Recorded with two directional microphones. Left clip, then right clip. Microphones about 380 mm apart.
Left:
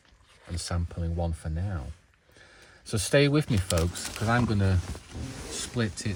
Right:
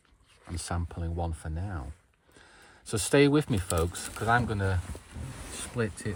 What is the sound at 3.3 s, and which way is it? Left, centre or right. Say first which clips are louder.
Speech: right 1 dB; centre.